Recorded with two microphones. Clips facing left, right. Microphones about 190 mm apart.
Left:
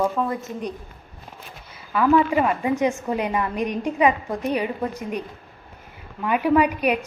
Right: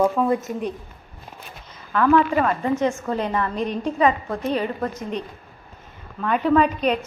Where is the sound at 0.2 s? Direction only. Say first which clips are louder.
Right 4 dB; centre (ahead or behind).